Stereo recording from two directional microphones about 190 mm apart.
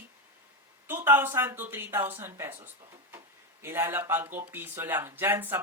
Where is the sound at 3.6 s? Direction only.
15° right (ahead or behind).